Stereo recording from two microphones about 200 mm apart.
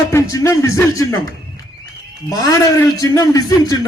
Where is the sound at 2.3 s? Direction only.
15° left (ahead or behind).